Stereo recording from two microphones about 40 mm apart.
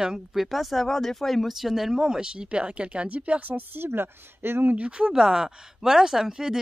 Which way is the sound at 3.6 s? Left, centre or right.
Right.